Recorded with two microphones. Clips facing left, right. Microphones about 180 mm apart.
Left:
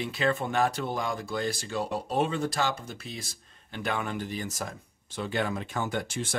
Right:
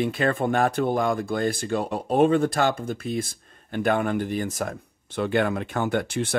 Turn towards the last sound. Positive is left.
turn(degrees=-60)  # may be behind; listen again after turning